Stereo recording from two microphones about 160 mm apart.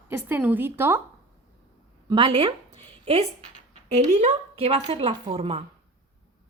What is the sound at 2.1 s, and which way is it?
A woman's voice, 35° right (ahead or behind).